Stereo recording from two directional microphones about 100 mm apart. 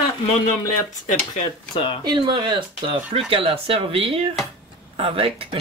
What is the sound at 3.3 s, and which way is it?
Speech, 70° right (ahead or behind).